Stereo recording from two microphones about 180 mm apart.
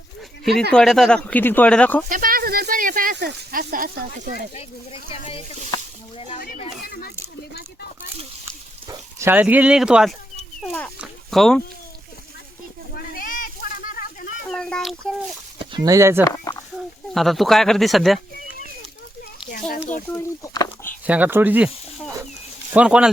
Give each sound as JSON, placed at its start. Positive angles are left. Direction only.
{"t": 0.7, "sound": "speech", "side_deg": 0}
{"t": 2.0, "sound": "speech", "side_deg": -50}
{"t": 3.2, "sound": "speech", "side_deg": -65}
{"t": 4.5, "sound": "speech", "side_deg": 35}
{"t": 6.8, "sound": "speech", "side_deg": 60}
{"t": 8.9, "sound": "speech", "side_deg": -15}
{"t": 12.9, "sound": "a sound", "side_deg": 55}
{"t": 14.4, "sound": "a sound", "side_deg": 5}
{"t": 15.5, "sound": "speech", "side_deg": -25}
{"t": 16.2, "sound": "speech", "side_deg": 20}
{"t": 16.7, "sound": "speech", "side_deg": 0}
{"t": 20.1, "sound": "speech", "side_deg": 20}
{"t": 21.1, "sound": "speech", "side_deg": -10}